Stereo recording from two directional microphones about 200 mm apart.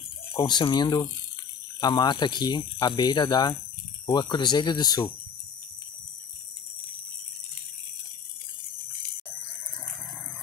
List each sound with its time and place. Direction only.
0.3 s speech: 20° left (ahead or behind)